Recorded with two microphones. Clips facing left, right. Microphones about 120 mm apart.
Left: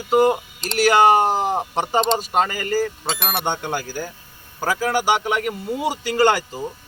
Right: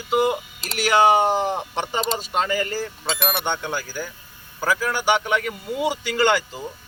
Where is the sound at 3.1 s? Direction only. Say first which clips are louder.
Even; centre (ahead or behind).